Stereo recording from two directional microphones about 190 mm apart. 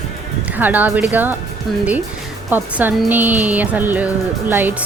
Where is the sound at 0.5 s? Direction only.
10° right (ahead or behind).